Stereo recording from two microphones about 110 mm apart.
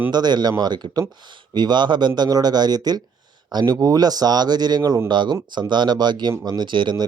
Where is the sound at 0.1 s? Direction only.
40° right (ahead or behind).